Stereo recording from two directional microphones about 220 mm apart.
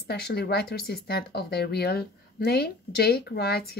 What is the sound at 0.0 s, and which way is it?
Speech, 45° left (ahead or behind).